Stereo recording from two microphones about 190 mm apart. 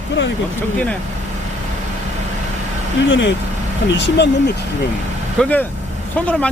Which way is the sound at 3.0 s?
70° left (ahead or behind).